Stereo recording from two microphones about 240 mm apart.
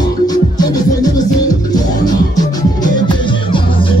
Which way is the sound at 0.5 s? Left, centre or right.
Centre.